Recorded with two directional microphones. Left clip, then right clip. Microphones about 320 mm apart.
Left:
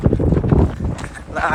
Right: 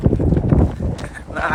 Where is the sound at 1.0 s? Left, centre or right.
Centre.